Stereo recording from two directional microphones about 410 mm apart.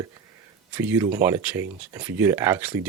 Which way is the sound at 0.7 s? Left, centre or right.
Centre.